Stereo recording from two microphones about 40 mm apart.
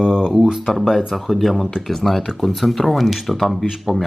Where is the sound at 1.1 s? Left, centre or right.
Centre.